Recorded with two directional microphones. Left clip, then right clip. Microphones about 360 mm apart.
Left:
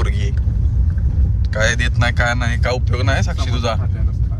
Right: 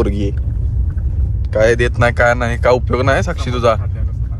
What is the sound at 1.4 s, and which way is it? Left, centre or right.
Speech, centre.